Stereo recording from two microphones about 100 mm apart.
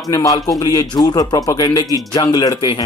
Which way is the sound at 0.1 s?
35° left (ahead or behind).